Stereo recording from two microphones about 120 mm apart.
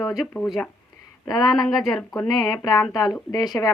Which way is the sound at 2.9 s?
35° left (ahead or behind).